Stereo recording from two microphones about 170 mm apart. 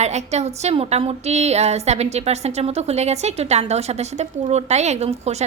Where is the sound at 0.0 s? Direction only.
40° right (ahead or behind).